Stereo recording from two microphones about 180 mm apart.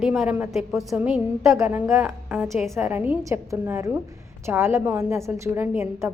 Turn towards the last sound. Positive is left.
turn(degrees=-10)  # may be behind; listen again after turning